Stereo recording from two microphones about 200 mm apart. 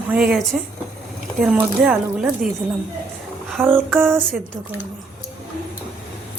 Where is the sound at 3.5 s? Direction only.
10° right (ahead or behind).